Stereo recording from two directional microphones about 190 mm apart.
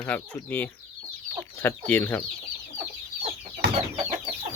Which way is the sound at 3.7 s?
35° right (ahead or behind).